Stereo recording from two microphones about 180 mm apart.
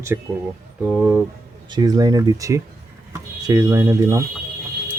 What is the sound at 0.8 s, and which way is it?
Speech, 5° right (ahead or behind).